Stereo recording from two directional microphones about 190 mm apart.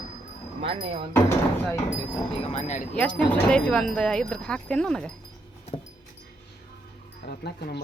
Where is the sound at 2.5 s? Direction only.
40° left (ahead or behind).